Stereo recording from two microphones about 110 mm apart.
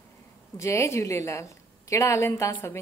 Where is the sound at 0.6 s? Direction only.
25° left (ahead or behind).